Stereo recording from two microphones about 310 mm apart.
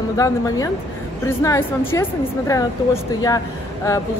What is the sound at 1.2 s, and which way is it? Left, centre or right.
Speech, centre.